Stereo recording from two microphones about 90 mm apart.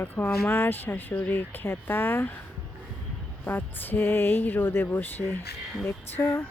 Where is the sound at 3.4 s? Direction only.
20° left (ahead or behind).